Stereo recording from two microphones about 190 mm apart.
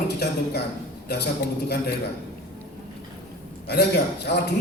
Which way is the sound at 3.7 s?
60° left (ahead or behind).